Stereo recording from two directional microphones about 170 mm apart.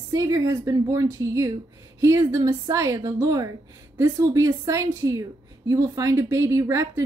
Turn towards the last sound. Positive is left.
turn(degrees=-15)  # may be behind; listen again after turning